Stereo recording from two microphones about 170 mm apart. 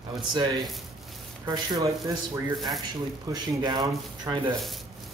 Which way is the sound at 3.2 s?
25° right (ahead or behind).